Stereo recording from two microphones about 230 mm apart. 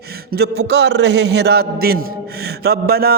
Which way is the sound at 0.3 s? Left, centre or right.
Right.